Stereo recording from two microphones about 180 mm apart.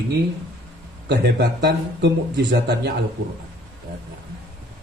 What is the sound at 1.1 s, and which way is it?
A man's voice, 65° right (ahead or behind).